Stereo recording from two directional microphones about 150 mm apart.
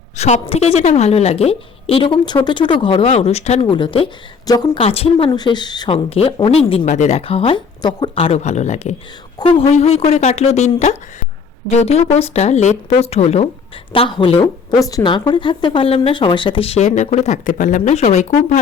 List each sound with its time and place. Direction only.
0.2 s a woman's voice: 45° left (ahead or behind)
3.7 s speech: 35° left (ahead or behind)
4.8 s speech: 40° left (ahead or behind)
6.1 s speech: 40° left (ahead or behind)
6.8 s a woman's voice: 55° left (ahead or behind)
9.4 s a woman's voice: 40° left (ahead or behind)
14.4 s speech: 25° left (ahead or behind); by 18.6 s 55° left (ahead or behind)